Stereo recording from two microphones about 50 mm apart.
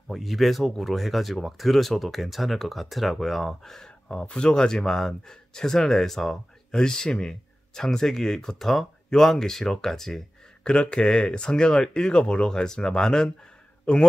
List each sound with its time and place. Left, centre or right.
0.1 s speech: centre
4.1 s speech: left